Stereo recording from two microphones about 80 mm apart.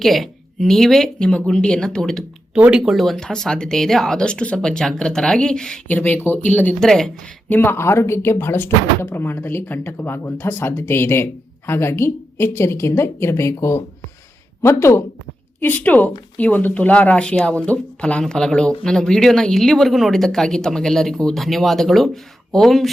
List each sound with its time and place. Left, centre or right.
0.0 s speech: centre
2.6 s speech: centre
2.9 s speech: centre
5.9 s speech: left
6.7 s speech: centre
7.5 s speech: left
15.6 s speech: left; by 22.9 s centre